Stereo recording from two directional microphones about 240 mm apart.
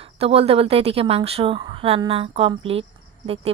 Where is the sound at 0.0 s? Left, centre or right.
Right.